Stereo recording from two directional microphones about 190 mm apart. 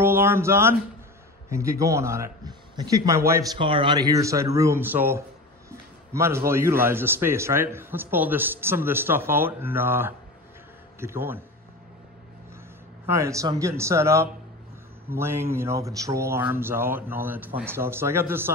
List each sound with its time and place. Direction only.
0.0 s a sound: 10° right (ahead or behind)
1.5 s a man's voice: 15° right (ahead or behind)
3.5 s a man's voice: 30° right (ahead or behind); by 11.4 s 10° right (ahead or behind)
13.0 s a man's voice: 15° right (ahead or behind)